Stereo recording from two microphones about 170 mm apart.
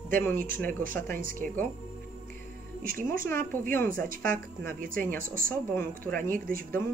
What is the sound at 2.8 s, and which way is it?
Speech, 55° right (ahead or behind).